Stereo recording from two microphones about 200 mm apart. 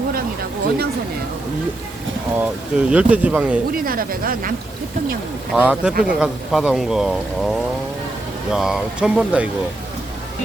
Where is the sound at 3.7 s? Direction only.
45° right (ahead or behind).